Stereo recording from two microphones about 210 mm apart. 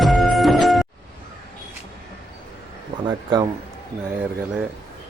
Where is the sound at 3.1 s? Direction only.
20° right (ahead or behind).